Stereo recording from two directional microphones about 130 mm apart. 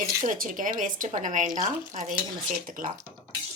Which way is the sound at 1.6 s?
70° right (ahead or behind).